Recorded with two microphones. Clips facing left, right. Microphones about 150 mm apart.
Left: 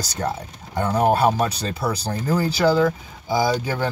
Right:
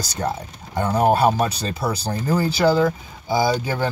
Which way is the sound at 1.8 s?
20° right (ahead or behind).